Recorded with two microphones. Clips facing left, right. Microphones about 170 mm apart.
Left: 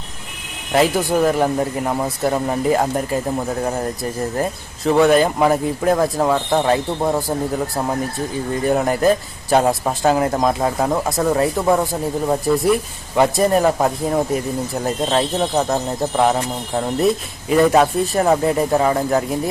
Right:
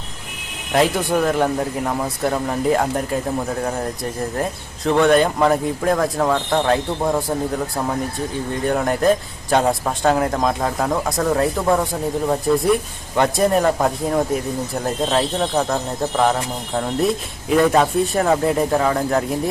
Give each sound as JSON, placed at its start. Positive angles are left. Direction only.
{"t": 0.7, "sound": "a man's voice", "side_deg": 0}
{"t": 4.4, "sound": "a man's voice", "side_deg": 5}
{"t": 8.5, "sound": "a man's voice", "side_deg": 5}